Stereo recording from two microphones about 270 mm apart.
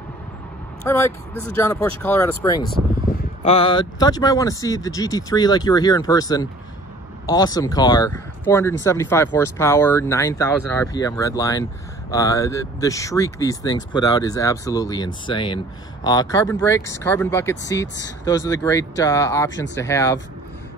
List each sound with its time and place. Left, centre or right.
0.8 s speech: centre